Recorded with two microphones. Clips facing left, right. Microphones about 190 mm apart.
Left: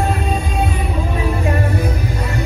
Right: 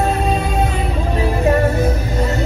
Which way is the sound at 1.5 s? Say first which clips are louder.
Right 4 dB; 40° right (ahead or behind).